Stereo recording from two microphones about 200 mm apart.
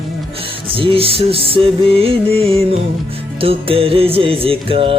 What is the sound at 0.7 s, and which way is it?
Music, 25° right (ahead or behind).